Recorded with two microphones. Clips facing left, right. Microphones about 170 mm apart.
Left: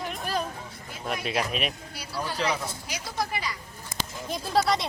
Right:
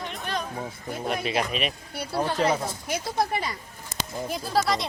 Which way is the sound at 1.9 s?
55° right (ahead or behind).